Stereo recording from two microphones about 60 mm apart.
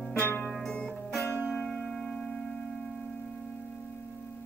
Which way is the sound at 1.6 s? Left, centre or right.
Centre.